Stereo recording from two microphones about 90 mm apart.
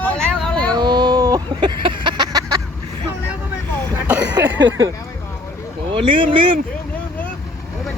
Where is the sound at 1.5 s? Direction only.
60° right (ahead or behind).